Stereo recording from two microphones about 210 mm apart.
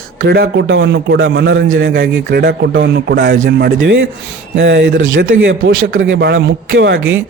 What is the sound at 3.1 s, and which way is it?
A man's voice, 60° right (ahead or behind).